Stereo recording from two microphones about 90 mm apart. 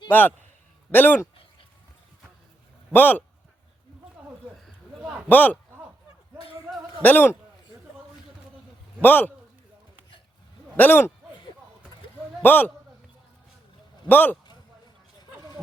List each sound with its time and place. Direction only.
0.1 s a man's voice: 20° left (ahead or behind)
2.9 s a man's voice: 20° left (ahead or behind)
5.3 s a man's voice: 20° left (ahead or behind)
6.7 s a sound: 15° right (ahead or behind)
7.0 s a man's voice: 20° left (ahead or behind)
9.0 s a man's voice: 20° left (ahead or behind)
10.8 s a man's voice: 20° left (ahead or behind)
12.4 s a man's voice: 20° left (ahead or behind)
14.1 s a man's voice: 20° left (ahead or behind)